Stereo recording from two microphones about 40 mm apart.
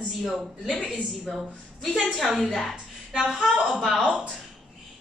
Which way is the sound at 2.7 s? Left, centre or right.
Centre.